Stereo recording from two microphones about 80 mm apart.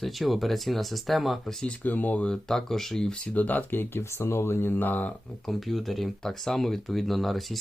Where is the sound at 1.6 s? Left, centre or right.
Centre.